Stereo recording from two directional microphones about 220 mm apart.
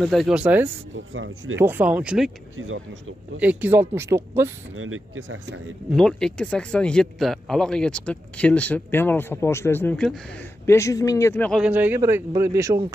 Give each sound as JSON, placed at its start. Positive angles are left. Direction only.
{"t": 0.0, "sound": "speech", "side_deg": 0}
{"t": 0.9, "sound": "speech", "side_deg": -60}
{"t": 1.6, "sound": "speech", "side_deg": -10}
{"t": 2.5, "sound": "speech", "side_deg": -65}
{"t": 3.3, "sound": "speech", "side_deg": -5}
{"t": 4.7, "sound": "speech", "side_deg": -65}
{"t": 5.9, "sound": "speech", "side_deg": 0}